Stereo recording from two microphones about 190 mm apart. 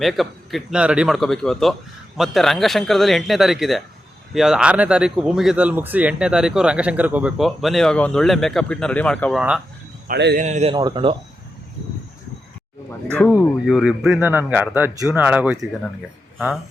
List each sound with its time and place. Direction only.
0.0 s speech: centre (ahead or behind)
10.1 s speech: 65° right (ahead or behind)
10.3 s a man's voice: 40° right (ahead or behind)
10.8 s speech: 25° right (ahead or behind)
13.7 s speech: centre (ahead or behind)